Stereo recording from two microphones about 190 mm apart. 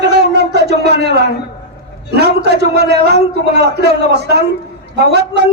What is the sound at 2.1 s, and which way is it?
A man's voice, 60° right (ahead or behind).